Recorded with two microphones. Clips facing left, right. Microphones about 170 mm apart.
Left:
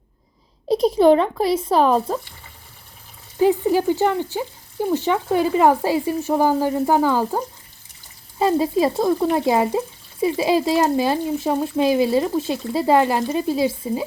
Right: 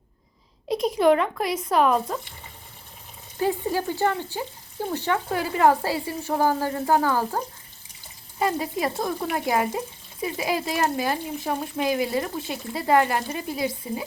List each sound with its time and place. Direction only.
0.7 s speech: 35° left (ahead or behind)
3.4 s speech: 15° left (ahead or behind)